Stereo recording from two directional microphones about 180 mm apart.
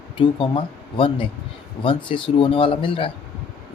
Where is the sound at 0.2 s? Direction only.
30° left (ahead or behind).